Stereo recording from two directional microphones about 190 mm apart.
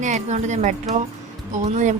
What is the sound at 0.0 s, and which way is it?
Speech, 35° right (ahead or behind).